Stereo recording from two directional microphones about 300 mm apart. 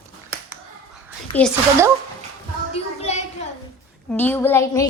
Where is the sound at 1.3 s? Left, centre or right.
Centre.